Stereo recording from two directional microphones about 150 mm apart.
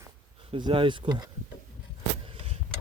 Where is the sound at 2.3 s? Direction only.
40° right (ahead or behind).